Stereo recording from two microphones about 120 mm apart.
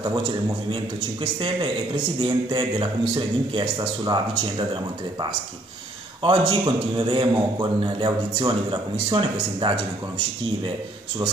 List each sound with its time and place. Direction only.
1.2 s a man's voice: 40° right (ahead or behind)
6.2 s a man's voice: 40° right (ahead or behind)